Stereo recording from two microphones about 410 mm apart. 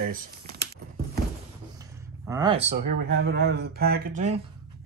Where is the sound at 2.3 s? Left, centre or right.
Centre.